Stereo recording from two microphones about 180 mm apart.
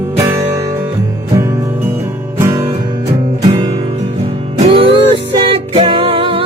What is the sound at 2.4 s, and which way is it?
Music, 20° right (ahead or behind).